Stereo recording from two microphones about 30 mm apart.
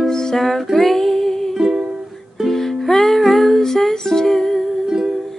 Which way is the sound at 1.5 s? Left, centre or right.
Centre.